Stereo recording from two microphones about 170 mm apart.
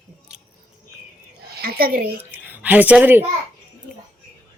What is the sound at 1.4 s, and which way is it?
Speech, 65° right (ahead or behind).